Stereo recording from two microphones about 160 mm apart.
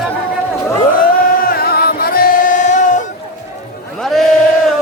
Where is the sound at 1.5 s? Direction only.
70° left (ahead or behind); by 3.0 s 50° left (ahead or behind).